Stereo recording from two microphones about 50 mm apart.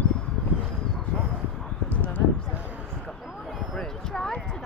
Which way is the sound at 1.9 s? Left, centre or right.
Left.